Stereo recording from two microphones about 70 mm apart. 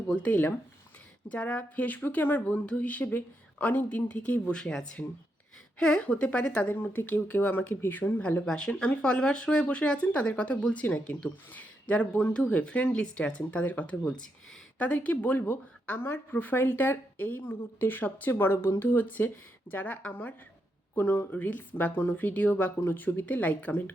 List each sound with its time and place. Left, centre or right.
0.2 s speech: left
8.4 s speech: centre